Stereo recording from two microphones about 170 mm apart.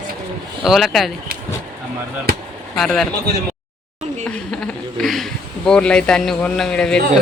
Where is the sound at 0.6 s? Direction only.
Centre (ahead or behind).